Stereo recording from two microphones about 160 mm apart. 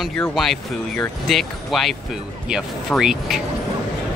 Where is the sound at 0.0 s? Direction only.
Centre (ahead or behind).